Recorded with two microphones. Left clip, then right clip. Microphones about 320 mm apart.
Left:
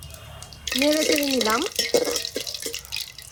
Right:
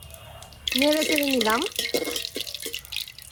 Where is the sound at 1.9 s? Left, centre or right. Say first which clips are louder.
Left 5 dB; centre.